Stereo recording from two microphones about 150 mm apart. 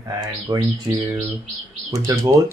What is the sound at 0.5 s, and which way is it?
Speech, 25° right (ahead or behind).